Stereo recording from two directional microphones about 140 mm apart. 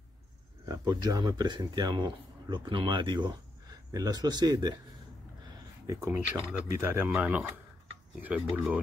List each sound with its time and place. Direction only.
0.7 s speech: 30° right (ahead or behind)
5.9 s speech: 20° right (ahead or behind)